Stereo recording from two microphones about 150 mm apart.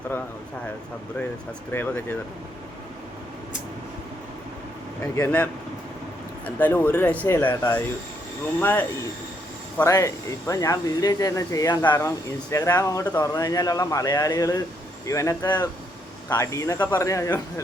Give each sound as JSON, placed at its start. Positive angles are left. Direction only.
{"t": 1.7, "sound": "speech", "side_deg": 15}
{"t": 5.1, "sound": "speech", "side_deg": 10}
{"t": 9.7, "sound": "speech", "side_deg": 20}